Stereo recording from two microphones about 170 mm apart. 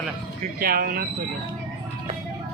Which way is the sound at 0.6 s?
60° right (ahead or behind).